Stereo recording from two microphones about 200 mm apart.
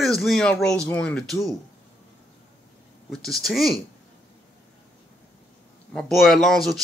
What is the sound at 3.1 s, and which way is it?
Speech, centre (ahead or behind).